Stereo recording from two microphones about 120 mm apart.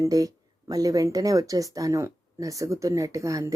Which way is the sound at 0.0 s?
30° right (ahead or behind).